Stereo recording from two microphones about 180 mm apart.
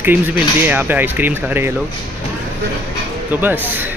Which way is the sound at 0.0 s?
10° right (ahead or behind).